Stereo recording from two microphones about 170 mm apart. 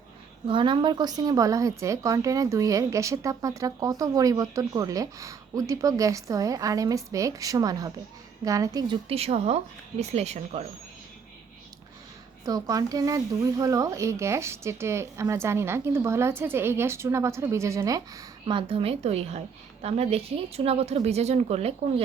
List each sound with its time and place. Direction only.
0.4 s a woman's voice: 30° right (ahead or behind)
9.0 s speech: 35° right (ahead or behind)
12.5 s speech: 20° right (ahead or behind)
18.4 s speech: 30° right (ahead or behind)